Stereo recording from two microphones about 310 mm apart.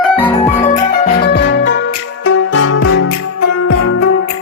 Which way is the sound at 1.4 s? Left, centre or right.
Left.